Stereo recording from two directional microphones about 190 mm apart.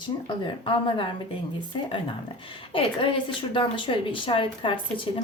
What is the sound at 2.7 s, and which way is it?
A woman's voice, 30° left (ahead or behind).